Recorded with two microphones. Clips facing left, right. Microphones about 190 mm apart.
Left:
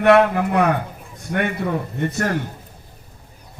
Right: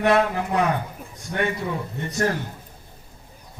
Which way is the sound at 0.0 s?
60° left (ahead or behind).